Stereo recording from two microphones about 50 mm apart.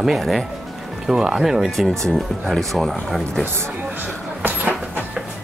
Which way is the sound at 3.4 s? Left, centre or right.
Right.